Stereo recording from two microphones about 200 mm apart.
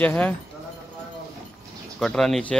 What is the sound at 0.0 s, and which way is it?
Speech, 5° left (ahead or behind).